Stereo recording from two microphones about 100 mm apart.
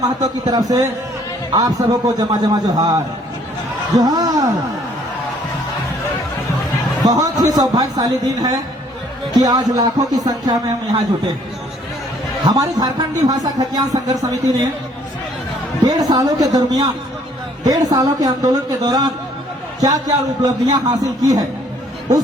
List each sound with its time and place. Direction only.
0.0 s a man's voice: 40° right (ahead or behind)
7.0 s speech: 35° right (ahead or behind)
12.5 s speech: 40° right (ahead or behind)
15.9 s speech: 40° right (ahead or behind)